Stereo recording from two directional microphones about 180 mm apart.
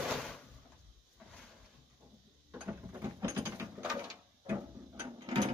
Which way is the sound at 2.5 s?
10° right (ahead or behind).